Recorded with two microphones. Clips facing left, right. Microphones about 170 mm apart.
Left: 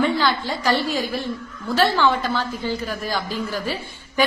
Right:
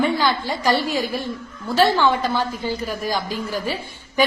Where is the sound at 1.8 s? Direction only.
15° right (ahead or behind).